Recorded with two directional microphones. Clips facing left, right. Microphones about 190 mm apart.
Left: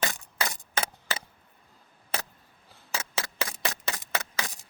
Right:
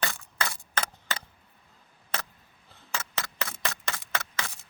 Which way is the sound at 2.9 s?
15° left (ahead or behind).